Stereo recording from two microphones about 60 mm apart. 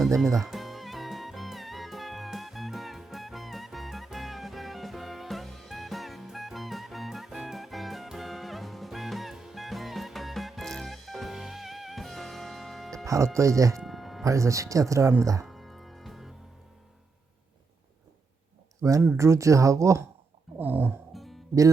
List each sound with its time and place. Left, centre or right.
0.2 s music: centre
13.1 s speech: right
13.7 s music: centre
14.3 s speech: right
15.4 s music: centre
18.8 s speech: right
20.6 s music: right
21.1 s music: centre